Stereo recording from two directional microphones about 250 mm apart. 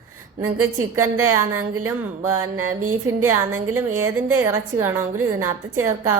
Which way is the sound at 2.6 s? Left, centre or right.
Right.